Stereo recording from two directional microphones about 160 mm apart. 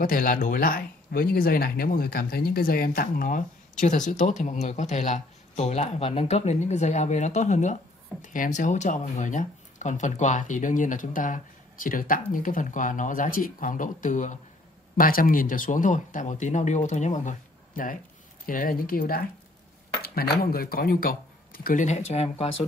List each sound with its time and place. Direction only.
0.0 s speech: 60° left (ahead or behind)
3.8 s speech: 50° left (ahead or behind)
15.0 s speech: 65° left (ahead or behind)
21.8 s speech: 45° left (ahead or behind)